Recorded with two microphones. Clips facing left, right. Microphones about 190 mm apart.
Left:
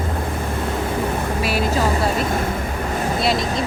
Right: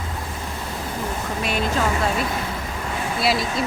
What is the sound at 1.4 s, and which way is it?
Speech, 5° left (ahead or behind).